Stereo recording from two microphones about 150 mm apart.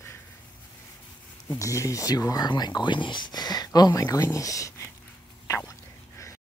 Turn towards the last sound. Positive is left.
turn(degrees=20)  # may be behind; listen again after turning